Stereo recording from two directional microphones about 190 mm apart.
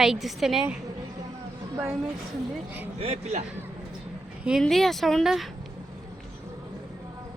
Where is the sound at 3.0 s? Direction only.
35° right (ahead or behind).